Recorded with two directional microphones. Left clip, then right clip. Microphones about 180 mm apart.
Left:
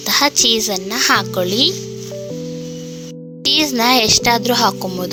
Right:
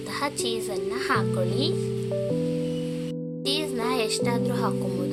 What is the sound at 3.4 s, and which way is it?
Speech, 50° left (ahead or behind).